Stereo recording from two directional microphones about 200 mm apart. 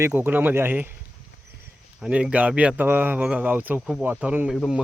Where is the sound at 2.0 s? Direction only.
5° right (ahead or behind).